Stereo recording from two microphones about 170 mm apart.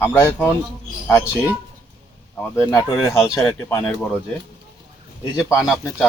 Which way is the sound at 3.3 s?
10° left (ahead or behind).